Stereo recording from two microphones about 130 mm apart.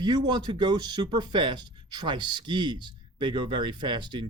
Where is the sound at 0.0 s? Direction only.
35° right (ahead or behind).